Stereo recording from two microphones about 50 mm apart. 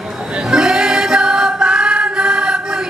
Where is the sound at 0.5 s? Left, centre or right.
Centre.